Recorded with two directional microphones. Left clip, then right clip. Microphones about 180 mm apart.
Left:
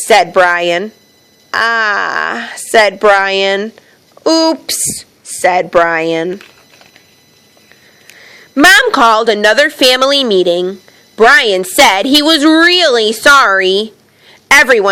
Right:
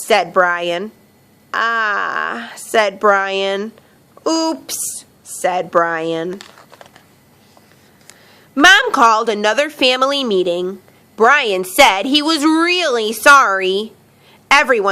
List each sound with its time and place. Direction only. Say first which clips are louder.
0.0 s a woman's voice: left 6 dB; 25° left (ahead or behind)
8.2 s a woman's voice: left 3 dB; 30° left (ahead or behind)